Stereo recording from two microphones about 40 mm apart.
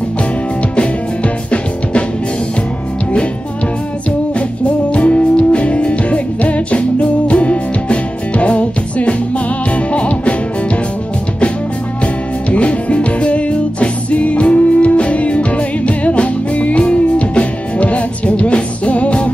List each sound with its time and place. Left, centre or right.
0.7 s music: left
4.4 s music: left
12.4 s music: left